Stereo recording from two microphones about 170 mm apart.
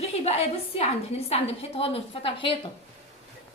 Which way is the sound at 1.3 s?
35° left (ahead or behind).